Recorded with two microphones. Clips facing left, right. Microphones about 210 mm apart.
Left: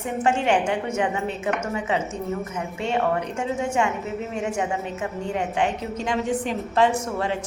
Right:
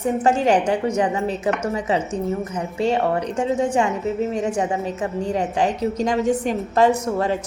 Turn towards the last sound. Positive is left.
turn(degrees=-40)  # may be behind; listen again after turning